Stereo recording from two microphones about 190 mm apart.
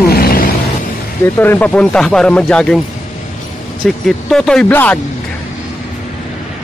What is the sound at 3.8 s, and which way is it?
Speech, centre (ahead or behind).